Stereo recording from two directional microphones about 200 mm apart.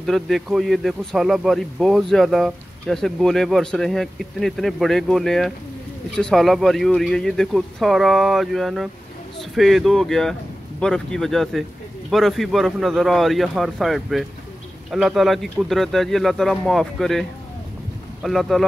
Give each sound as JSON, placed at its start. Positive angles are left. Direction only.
{"t": 0.0, "sound": "speech", "side_deg": 0}